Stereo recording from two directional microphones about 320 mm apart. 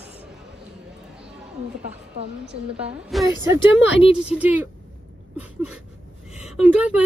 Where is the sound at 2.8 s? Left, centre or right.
Centre.